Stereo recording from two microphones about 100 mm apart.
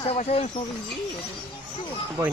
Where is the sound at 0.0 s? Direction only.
70° left (ahead or behind).